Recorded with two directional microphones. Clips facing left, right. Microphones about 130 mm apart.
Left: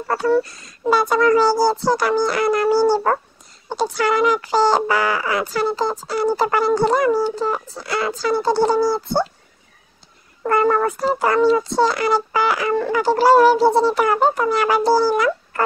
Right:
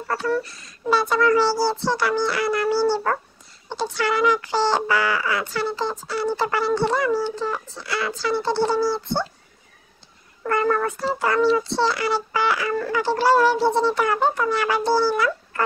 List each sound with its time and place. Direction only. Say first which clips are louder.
0.1 s speech: left 6 dB; 35° left (ahead or behind)
10.4 s speech: left 4 dB; 35° left (ahead or behind)
15.1 s a sound: left 4 dB; 40° left (ahead or behind)